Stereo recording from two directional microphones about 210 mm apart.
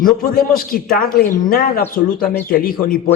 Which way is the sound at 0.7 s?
40° left (ahead or behind).